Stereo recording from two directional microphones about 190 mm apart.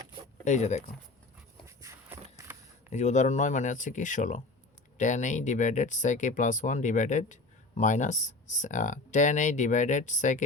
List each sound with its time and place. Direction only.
0.4 s speech: 40° left (ahead or behind)
1.6 s dog: 15° right (ahead or behind)
2.9 s speech: 40° left (ahead or behind)